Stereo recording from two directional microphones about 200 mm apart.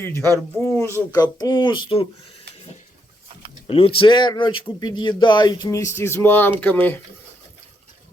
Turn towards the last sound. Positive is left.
turn(degrees=10)  # may be behind; listen again after turning